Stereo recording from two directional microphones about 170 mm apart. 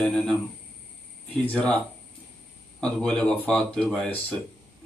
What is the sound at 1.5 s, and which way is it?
Speech, 5° left (ahead or behind).